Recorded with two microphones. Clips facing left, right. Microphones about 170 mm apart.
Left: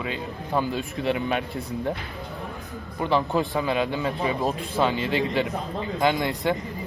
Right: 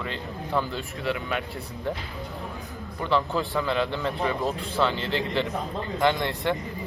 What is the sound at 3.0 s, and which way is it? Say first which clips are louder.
Speech: left 2 dB; 15° left (ahead or behind).